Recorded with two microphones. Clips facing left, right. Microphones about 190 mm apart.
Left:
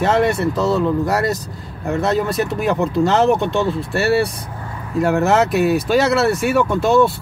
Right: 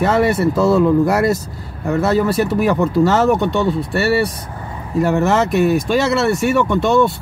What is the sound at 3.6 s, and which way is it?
Speech, centre (ahead or behind).